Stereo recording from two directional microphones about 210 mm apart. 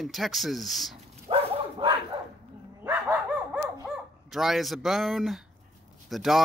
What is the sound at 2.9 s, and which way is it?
Dog, 10° right (ahead or behind).